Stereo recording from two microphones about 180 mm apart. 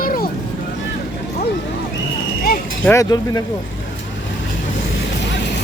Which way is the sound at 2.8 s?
15° left (ahead or behind).